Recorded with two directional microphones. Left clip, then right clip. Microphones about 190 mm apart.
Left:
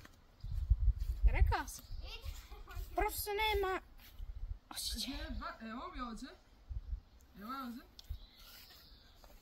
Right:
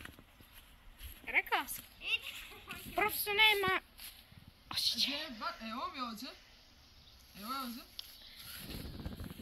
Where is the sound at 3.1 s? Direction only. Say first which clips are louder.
Right 10 dB; 15° left (ahead or behind).